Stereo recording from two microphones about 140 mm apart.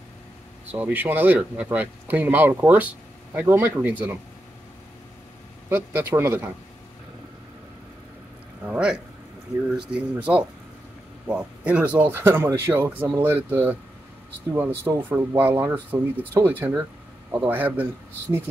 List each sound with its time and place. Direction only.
0.7 s speech: 10° right (ahead or behind)
5.7 s speech: 15° right (ahead or behind)
8.6 s speech: 5° right (ahead or behind)